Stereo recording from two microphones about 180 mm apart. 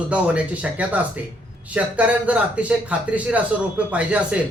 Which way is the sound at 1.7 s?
10° right (ahead or behind).